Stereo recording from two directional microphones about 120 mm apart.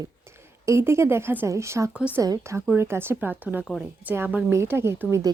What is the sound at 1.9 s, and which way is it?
Speech, 10° right (ahead or behind).